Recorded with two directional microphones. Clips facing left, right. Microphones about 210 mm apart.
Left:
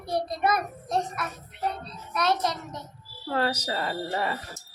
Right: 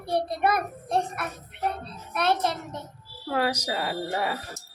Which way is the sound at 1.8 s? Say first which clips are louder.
Right 1 dB; 55° right (ahead or behind).